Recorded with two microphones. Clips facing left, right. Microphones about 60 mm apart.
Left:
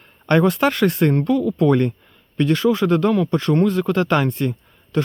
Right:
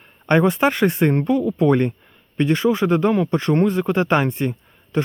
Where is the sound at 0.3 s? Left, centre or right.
Centre.